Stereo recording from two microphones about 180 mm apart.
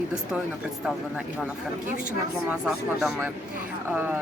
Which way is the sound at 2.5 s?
5° right (ahead or behind).